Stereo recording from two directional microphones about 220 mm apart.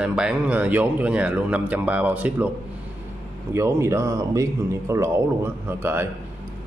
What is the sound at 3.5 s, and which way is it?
A man's voice, 10° right (ahead or behind).